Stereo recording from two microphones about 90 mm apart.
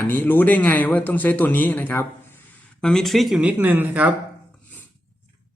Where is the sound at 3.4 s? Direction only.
20° right (ahead or behind).